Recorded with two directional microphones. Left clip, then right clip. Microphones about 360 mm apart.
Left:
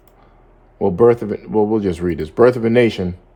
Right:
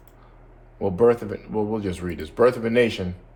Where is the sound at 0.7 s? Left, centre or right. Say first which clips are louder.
Left 6 dB; left.